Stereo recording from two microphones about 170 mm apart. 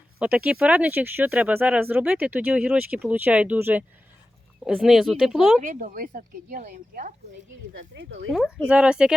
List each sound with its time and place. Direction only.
0.2 s speech: 10° right (ahead or behind)
5.6 s speech: 55° right (ahead or behind)
7.7 s speech: 90° right
8.3 s speech: 5° left (ahead or behind)
8.6 s speech: 5° right (ahead or behind)